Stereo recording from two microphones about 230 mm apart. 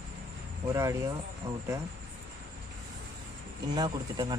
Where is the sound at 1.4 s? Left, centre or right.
Right.